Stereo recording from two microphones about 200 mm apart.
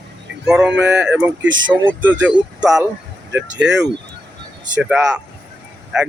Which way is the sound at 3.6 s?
60° right (ahead or behind).